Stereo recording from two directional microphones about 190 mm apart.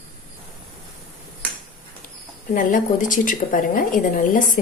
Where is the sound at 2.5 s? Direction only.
45° left (ahead or behind).